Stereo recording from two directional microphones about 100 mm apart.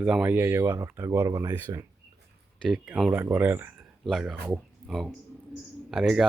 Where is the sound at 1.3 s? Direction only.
35° right (ahead or behind).